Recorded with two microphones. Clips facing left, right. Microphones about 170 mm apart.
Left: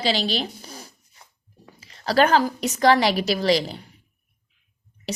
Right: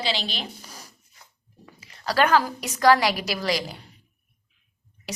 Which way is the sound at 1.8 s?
25° left (ahead or behind).